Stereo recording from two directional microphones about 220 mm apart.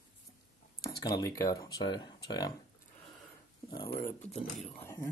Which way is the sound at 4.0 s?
5° left (ahead or behind).